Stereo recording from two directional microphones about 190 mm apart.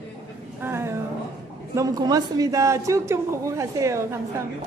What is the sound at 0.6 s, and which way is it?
A man's voice, 10° right (ahead or behind).